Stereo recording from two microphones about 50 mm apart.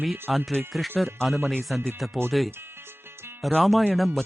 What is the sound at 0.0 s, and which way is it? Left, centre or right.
Speech, centre.